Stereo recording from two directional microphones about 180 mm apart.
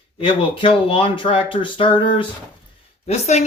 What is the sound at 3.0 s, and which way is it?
Speech, 40° left (ahead or behind).